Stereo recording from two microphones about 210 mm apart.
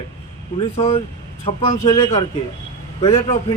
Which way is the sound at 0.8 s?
25° left (ahead or behind).